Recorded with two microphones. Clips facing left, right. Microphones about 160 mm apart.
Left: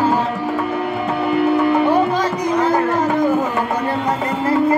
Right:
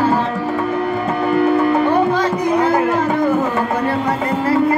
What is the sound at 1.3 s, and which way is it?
Music, 10° left (ahead or behind).